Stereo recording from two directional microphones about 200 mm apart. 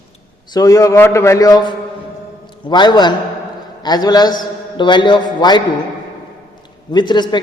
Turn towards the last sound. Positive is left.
turn(degrees=20)  # may be behind; listen again after turning